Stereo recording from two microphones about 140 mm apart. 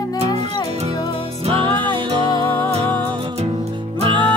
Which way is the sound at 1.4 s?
40° right (ahead or behind).